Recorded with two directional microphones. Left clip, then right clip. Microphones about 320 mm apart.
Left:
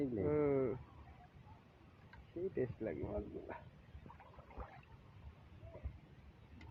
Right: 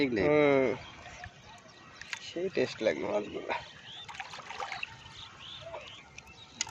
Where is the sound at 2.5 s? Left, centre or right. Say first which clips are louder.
Right 14 dB; centre.